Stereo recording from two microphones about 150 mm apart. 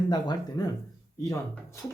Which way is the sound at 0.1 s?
30° left (ahead or behind).